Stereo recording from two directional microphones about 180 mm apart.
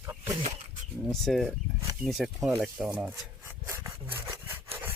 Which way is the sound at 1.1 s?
Centre (ahead or behind).